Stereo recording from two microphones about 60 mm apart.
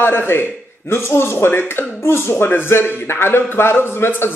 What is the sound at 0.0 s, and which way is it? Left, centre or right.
A man's voice, left.